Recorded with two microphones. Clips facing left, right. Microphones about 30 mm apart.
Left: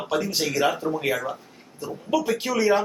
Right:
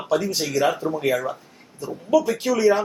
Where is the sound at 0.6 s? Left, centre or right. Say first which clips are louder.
Right 2 dB; centre.